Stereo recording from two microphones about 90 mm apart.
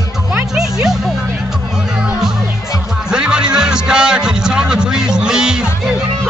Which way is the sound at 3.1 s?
10° right (ahead or behind).